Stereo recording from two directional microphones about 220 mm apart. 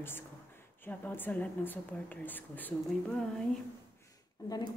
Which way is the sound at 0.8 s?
10° left (ahead or behind).